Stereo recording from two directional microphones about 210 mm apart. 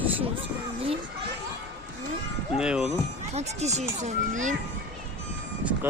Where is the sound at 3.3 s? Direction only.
30° right (ahead or behind).